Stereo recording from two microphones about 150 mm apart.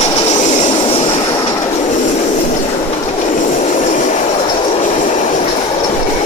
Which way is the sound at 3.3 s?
55° left (ahead or behind).